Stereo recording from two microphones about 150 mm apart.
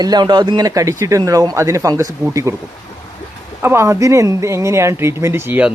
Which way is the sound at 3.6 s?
15° right (ahead or behind).